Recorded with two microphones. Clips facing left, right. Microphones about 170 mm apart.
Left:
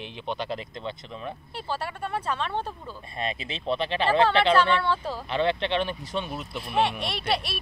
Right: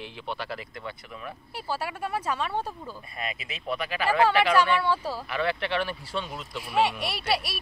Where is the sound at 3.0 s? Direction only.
25° left (ahead or behind).